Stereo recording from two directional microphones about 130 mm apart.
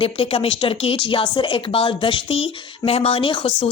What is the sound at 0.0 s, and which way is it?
A woman's voice, 45° left (ahead or behind).